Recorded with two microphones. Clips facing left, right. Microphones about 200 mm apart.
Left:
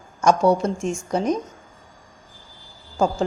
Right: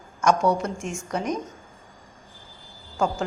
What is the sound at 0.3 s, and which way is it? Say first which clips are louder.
A woman's voice: left 4 dB; 30° left (ahead or behind).